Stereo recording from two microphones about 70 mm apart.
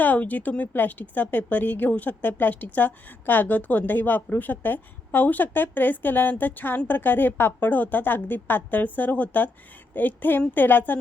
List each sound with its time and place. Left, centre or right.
0.0 s speech: left